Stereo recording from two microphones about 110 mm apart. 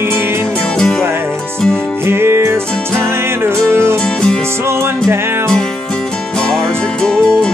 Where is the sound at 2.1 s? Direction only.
20° right (ahead or behind).